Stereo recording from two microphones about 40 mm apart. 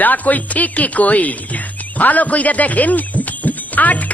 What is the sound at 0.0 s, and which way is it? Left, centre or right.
Speech, left.